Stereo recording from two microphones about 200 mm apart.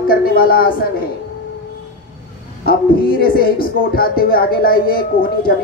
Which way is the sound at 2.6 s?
45° left (ahead or behind).